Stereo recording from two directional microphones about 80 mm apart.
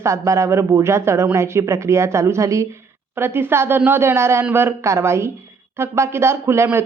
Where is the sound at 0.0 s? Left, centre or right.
Right.